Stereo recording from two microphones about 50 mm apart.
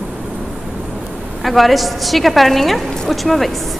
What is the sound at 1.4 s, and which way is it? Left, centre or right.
A woman's voice, centre.